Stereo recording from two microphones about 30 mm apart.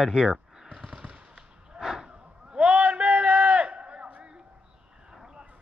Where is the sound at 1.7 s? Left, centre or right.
Centre.